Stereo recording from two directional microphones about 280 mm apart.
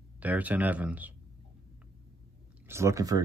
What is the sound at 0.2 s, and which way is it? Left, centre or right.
Speech, centre.